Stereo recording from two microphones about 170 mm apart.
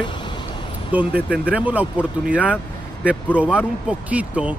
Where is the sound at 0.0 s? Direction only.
30° left (ahead or behind).